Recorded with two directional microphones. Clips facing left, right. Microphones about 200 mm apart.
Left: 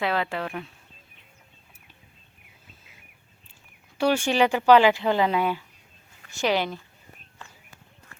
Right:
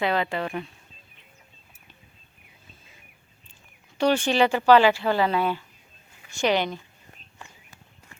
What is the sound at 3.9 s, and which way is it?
Speech, 10° left (ahead or behind).